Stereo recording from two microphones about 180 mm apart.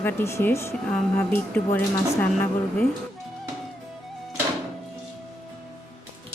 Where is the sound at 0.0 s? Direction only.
15° left (ahead or behind).